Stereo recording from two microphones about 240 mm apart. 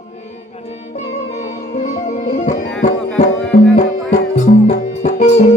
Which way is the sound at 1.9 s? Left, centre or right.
Left.